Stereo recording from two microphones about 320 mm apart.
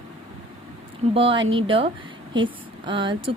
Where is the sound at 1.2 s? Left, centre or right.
Centre.